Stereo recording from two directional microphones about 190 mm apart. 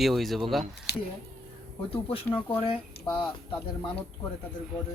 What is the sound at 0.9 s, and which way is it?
Speech, 60° left (ahead or behind).